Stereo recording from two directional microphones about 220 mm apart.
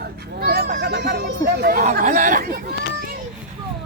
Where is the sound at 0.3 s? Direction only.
45° right (ahead or behind).